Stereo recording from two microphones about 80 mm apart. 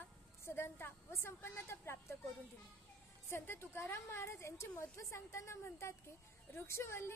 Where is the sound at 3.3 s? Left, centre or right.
Left.